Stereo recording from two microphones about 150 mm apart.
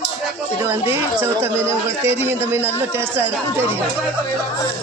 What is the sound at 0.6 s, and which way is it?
A man's voice, 15° right (ahead or behind).